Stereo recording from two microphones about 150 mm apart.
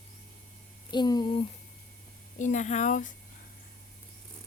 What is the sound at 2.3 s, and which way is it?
Speech, 55° left (ahead or behind).